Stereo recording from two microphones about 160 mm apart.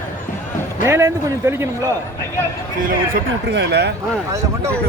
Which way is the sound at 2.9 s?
75° right (ahead or behind).